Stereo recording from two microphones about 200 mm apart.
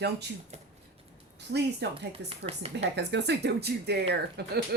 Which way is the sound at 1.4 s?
55° right (ahead or behind).